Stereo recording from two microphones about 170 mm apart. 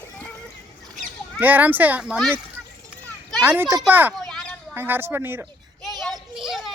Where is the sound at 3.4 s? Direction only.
10° right (ahead or behind).